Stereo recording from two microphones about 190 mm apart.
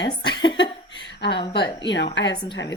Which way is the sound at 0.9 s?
60° left (ahead or behind).